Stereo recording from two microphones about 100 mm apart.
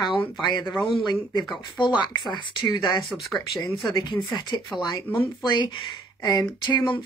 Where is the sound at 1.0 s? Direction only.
45° left (ahead or behind).